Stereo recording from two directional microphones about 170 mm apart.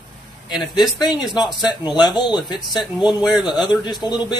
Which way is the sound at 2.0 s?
25° left (ahead or behind).